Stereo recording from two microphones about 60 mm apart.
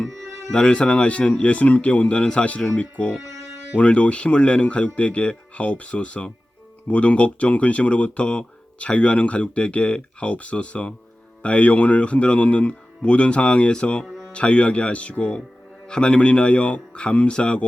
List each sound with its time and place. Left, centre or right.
0.5 s speech: centre
14.0 s music: centre
14.3 s speech: centre